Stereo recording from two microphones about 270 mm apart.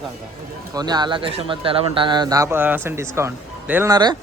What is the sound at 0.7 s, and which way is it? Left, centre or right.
Speech, centre.